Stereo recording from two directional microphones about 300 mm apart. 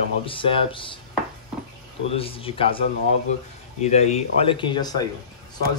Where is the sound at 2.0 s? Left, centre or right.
Centre.